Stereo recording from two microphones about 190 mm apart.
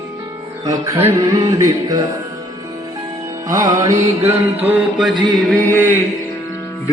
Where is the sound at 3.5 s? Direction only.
20° right (ahead or behind).